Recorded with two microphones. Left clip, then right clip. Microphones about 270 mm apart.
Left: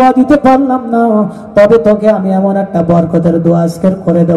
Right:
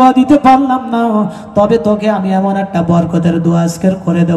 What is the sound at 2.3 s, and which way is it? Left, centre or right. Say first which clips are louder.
A man's voice: left 2 dB; centre.